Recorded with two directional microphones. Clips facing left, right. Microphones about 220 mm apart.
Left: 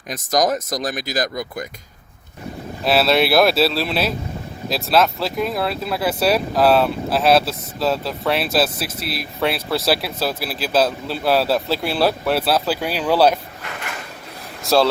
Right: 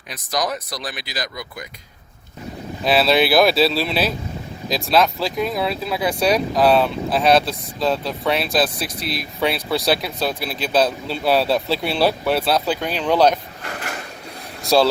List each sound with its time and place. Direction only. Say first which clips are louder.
0.1 s speech: left 5 dB; 45° left (ahead or behind)
2.8 s speech: even; centre (ahead or behind)
14.6 s speech: even; centre (ahead or behind)